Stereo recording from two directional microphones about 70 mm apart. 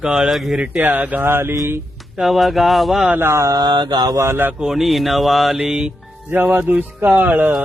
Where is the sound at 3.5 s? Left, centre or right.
Right.